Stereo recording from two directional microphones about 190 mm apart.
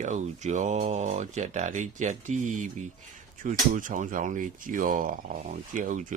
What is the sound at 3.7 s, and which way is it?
Speech, 45° right (ahead or behind).